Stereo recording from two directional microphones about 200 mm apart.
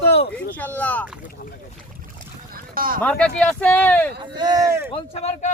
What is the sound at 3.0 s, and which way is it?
Speech, 5° left (ahead or behind).